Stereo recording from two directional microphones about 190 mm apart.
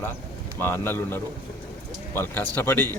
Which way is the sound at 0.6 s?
10° left (ahead or behind).